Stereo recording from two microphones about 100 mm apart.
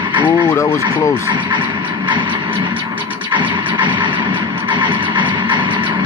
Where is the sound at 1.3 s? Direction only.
50° right (ahead or behind).